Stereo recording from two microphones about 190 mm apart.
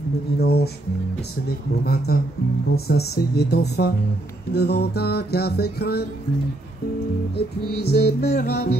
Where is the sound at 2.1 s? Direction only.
55° left (ahead or behind).